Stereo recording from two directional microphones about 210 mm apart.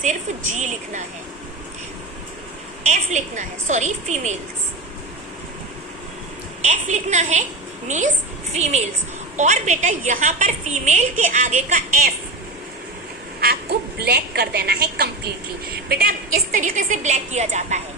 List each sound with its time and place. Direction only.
0.0 s a woman's voice: 35° right (ahead or behind)
2.8 s a woman's voice: 35° right (ahead or behind)
6.6 s a woman's voice: 35° right (ahead or behind)
13.4 s a woman's voice: 50° right (ahead or behind); by 17.8 s 35° right (ahead or behind)